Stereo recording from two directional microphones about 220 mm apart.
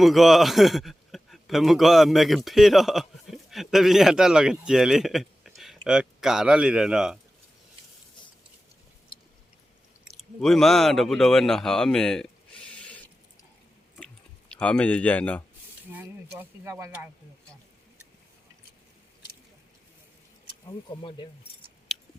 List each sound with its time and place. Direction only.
0.0 s a man's voice: centre (ahead or behind)
10.4 s speech: centre (ahead or behind)
14.5 s speech: 5° left (ahead or behind)
15.9 s speech: 10° right (ahead or behind)
20.7 s speech: 20° left (ahead or behind)